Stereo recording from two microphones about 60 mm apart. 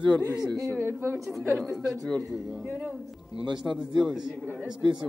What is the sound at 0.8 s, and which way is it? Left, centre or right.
Speech, right.